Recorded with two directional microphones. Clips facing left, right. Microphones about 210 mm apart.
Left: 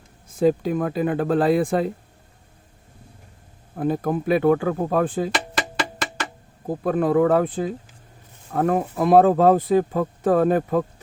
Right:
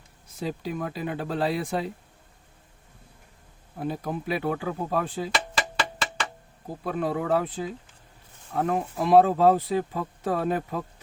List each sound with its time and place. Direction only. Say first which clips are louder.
0.3 s speech: left 12 dB; 50° left (ahead or behind)
3.8 s speech: left 8 dB; 50° left (ahead or behind)
6.7 s speech: left 8 dB; 50° left (ahead or behind)